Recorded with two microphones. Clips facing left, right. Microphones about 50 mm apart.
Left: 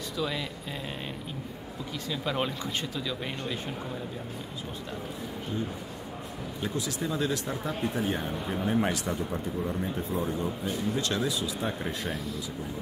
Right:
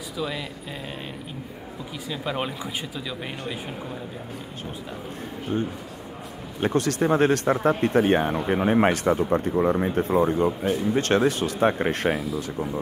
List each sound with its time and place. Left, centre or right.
0.2 s speech: centre
2.0 s speech: centre
6.6 s speech: right
10.3 s speech: right